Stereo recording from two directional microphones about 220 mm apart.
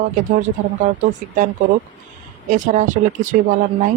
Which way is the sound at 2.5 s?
35° right (ahead or behind).